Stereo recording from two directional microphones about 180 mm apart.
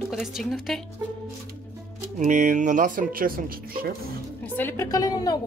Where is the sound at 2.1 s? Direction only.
45° right (ahead or behind).